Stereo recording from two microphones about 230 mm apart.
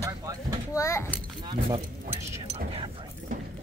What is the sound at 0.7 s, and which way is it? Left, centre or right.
Speech, centre.